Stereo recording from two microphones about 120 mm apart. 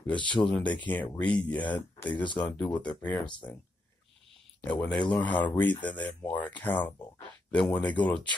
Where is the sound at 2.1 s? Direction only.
40° left (ahead or behind).